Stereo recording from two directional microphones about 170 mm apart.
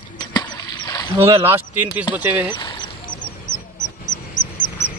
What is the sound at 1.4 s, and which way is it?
Speech, 10° right (ahead or behind).